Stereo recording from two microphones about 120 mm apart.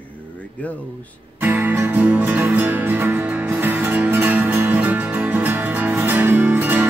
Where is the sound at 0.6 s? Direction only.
10° left (ahead or behind).